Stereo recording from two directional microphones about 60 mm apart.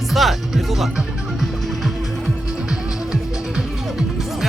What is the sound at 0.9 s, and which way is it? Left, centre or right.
Music, centre.